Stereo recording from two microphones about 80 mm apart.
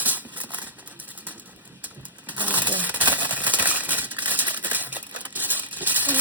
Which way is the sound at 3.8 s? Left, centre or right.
Right.